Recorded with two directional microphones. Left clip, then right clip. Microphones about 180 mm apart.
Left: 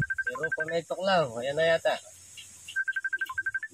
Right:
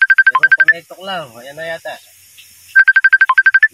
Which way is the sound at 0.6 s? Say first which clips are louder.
Right 17 dB; 15° left (ahead or behind).